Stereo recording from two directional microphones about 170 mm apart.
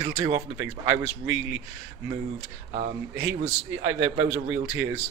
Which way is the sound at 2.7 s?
40° right (ahead or behind).